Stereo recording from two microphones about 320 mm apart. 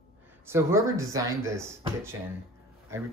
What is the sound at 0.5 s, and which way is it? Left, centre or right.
Speech, centre.